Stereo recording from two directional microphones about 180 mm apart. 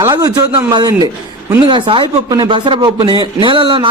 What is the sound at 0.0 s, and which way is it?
A man's voice, 20° right (ahead or behind).